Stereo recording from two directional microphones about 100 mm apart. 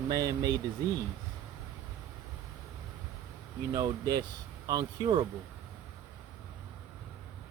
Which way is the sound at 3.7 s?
40° right (ahead or behind).